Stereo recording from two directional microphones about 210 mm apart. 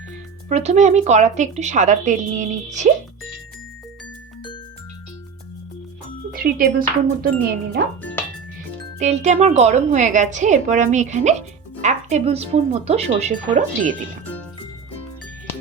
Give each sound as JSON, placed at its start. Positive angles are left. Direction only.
{"t": 0.4, "sound": "a woman's voice", "side_deg": -30}
{"t": 6.3, "sound": "speech", "side_deg": -45}
{"t": 8.2, "sound": "music", "side_deg": 10}
{"t": 9.0, "sound": "a woman's voice", "side_deg": -35}